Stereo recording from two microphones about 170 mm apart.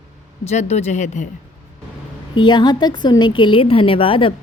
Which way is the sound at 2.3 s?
25° left (ahead or behind).